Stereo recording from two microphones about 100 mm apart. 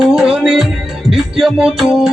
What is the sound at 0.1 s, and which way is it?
Music, 5° right (ahead or behind).